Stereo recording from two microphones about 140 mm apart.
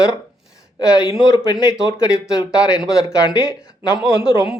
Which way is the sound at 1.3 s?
20° left (ahead or behind).